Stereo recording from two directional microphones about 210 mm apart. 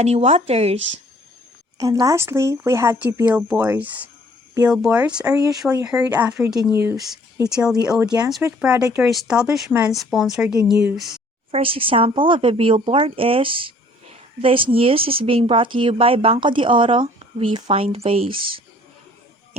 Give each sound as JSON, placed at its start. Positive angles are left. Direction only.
{"t": 0.0, "sound": "speech", "side_deg": -30}
{"t": 1.8, "sound": "speech", "side_deg": -15}
{"t": 11.5, "sound": "speech", "side_deg": -25}